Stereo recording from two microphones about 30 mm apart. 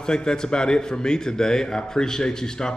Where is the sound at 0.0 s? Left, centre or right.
Left.